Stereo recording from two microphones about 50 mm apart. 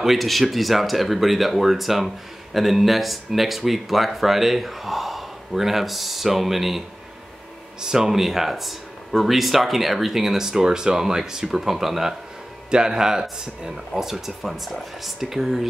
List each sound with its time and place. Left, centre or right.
0.0 s speech: centre
7.8 s speech: centre